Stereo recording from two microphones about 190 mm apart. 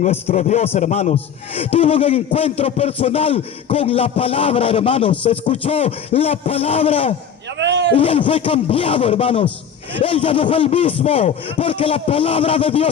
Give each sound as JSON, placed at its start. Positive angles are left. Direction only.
{"t": 0.0, "sound": "a man's voice", "side_deg": 35}
{"t": 7.6, "sound": "a sound", "side_deg": -70}
{"t": 7.9, "sound": "a man's voice", "side_deg": 30}